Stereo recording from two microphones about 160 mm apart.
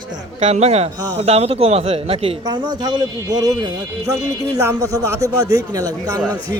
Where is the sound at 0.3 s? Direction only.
45° right (ahead or behind); by 6.2 s 25° right (ahead or behind).